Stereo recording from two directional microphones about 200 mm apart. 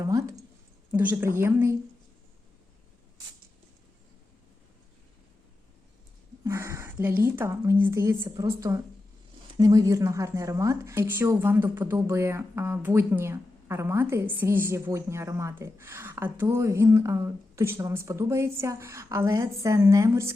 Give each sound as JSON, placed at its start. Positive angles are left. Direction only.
{"t": 0.0, "sound": "speech", "side_deg": -15}
{"t": 6.4, "sound": "speech", "side_deg": -15}